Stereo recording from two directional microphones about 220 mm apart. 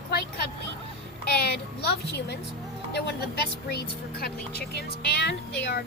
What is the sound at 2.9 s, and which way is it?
Speech, 50° left (ahead or behind).